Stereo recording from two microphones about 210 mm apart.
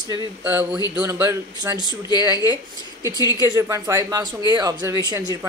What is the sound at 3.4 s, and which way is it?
A woman's voice, 15° right (ahead or behind).